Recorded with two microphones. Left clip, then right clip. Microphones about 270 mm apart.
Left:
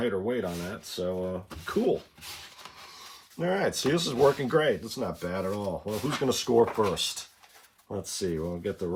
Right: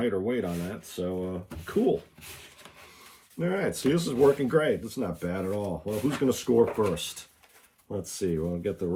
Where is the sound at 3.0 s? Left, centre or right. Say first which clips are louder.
Even; centre.